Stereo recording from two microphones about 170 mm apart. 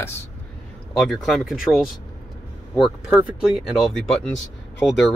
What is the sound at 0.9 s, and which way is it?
Speech, centre (ahead or behind).